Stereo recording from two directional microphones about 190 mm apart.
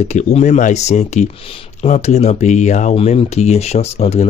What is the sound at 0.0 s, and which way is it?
Speech, 35° left (ahead or behind).